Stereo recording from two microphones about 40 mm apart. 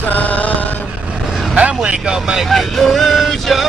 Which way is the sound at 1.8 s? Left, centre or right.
Centre.